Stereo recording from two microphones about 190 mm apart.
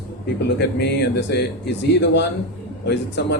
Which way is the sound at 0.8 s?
60° left (ahead or behind).